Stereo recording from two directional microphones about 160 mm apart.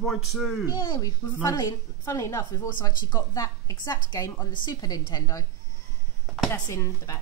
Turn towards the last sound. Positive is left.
turn(degrees=20)  # may be behind; listen again after turning